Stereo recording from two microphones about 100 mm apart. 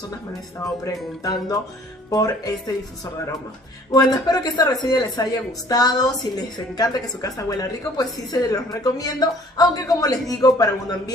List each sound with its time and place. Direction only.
0.8 s a woman's voice: 40° left (ahead or behind)
3.9 s a woman's voice: 40° left (ahead or behind)